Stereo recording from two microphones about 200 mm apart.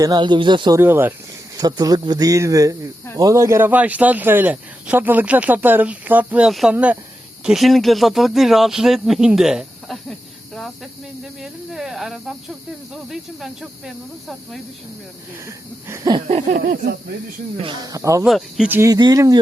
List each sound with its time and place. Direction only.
0.0 s speech: 20° right (ahead or behind)
0.8 s speech: 10° right (ahead or behind)
15.4 s speech: 15° right (ahead or behind)
16.1 s a sound: 30° right (ahead or behind)
16.5 s speech: 50° right (ahead or behind)
17.6 s speech: 20° right (ahead or behind)
18.3 s speech: centre (ahead or behind); by 19.4 s 20° right (ahead or behind)